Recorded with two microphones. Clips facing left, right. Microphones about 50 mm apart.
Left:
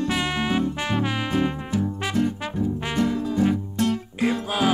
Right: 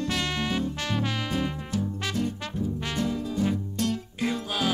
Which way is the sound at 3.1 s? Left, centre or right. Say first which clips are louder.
Left 5 dB; left.